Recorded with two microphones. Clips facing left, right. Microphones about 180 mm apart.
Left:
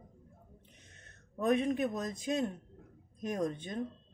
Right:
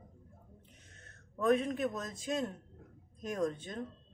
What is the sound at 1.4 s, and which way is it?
Speech, 20° left (ahead or behind).